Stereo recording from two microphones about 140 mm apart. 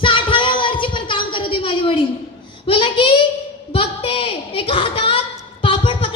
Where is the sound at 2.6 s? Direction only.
35° left (ahead or behind).